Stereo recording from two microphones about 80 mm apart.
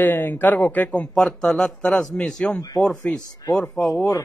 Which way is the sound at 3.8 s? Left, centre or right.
Centre.